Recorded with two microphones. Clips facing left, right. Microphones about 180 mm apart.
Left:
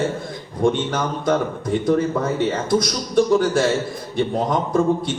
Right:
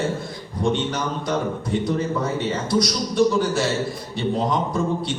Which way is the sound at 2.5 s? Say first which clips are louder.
Left 2 dB; 50° left (ahead or behind).